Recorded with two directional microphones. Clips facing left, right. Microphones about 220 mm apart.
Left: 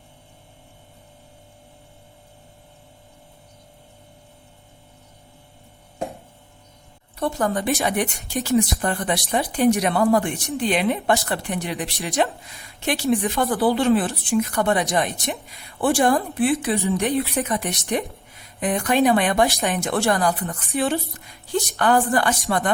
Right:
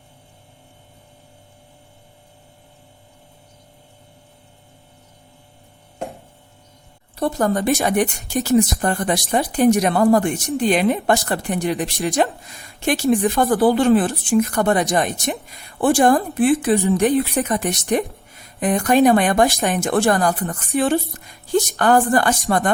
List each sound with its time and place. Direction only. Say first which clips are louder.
7.2 s speech: right 3 dB; 40° right (ahead or behind)